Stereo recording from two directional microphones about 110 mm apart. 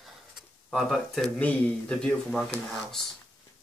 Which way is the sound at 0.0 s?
Centre (ahead or behind).